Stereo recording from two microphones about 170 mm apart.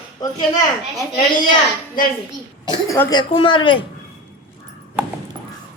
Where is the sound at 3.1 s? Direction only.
30° left (ahead or behind).